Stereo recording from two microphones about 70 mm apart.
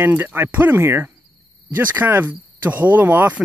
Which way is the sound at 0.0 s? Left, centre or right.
Right.